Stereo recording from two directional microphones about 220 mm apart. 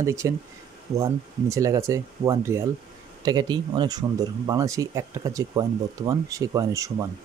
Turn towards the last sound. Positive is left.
turn(degrees=-15)  # may be behind; listen again after turning